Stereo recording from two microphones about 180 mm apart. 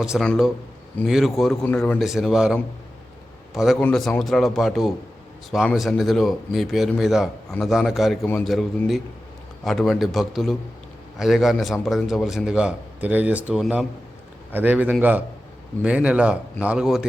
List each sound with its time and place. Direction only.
0.0 s a man's voice: centre (ahead or behind)
1.6 s speech: 10° left (ahead or behind)
2.0 s a man's voice: centre (ahead or behind)